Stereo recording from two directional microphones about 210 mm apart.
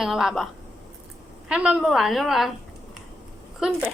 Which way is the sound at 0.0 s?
Centre (ahead or behind).